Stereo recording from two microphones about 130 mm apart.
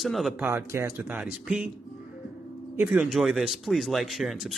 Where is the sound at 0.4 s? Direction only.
20° right (ahead or behind).